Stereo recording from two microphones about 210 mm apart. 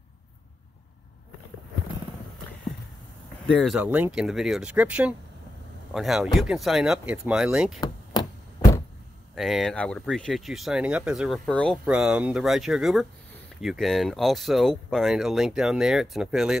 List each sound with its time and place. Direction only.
3.4 s speech: centre (ahead or behind)
7.8 s a sound: 20° left (ahead or behind)
9.3 s speech: centre (ahead or behind)